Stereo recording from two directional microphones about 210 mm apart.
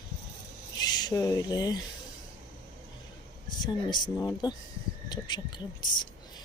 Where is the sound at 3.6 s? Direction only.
20° left (ahead or behind).